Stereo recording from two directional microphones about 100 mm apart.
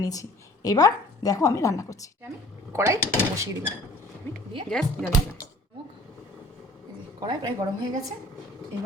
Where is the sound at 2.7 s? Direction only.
30° right (ahead or behind).